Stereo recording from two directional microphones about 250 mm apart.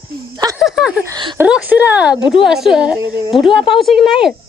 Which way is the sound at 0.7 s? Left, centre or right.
Centre.